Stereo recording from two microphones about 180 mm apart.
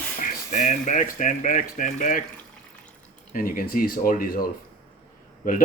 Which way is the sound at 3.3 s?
50° left (ahead or behind).